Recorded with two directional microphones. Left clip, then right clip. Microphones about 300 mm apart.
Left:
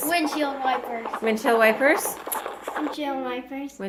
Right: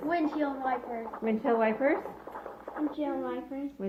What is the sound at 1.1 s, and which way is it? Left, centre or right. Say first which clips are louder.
Speech: left 7 dB; left.